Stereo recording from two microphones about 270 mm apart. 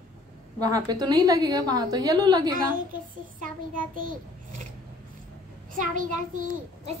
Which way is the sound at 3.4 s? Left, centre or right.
Right.